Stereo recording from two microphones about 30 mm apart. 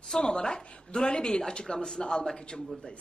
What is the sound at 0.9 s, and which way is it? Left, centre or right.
Speech, left.